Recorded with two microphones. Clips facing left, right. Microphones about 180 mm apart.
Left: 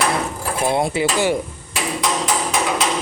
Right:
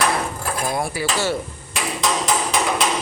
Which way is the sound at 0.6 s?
25° left (ahead or behind).